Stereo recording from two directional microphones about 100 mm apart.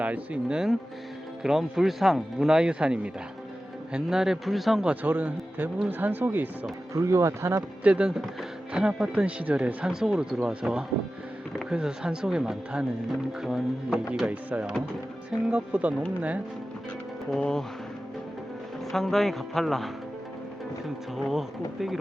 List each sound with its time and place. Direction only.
0.0 s speech: 10° right (ahead or behind)
6.9 s speech: 30° right (ahead or behind)
7.9 s speech: 10° right (ahead or behind)
17.3 s speech: 5° left (ahead or behind)
18.9 s speech: 5° left (ahead or behind)
21.2 s speech: 5° right (ahead or behind)